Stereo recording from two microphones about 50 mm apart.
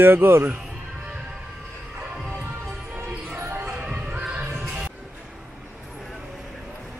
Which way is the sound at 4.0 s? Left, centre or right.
Right.